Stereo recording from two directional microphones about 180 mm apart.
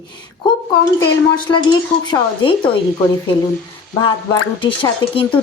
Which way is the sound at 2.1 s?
30° left (ahead or behind).